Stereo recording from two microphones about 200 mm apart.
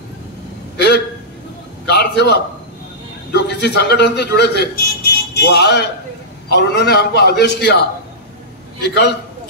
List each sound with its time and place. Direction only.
0.7 s hiccup: 55° left (ahead or behind)
1.9 s a sound: 60° left (ahead or behind)
3.3 s speech: 55° left (ahead or behind)
8.8 s speech: 55° left (ahead or behind)